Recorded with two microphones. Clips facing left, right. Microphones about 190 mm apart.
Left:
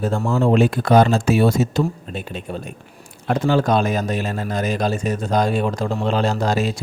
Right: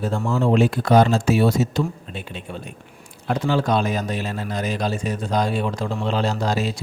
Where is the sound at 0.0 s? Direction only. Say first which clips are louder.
Left 2 dB; 45° left (ahead or behind).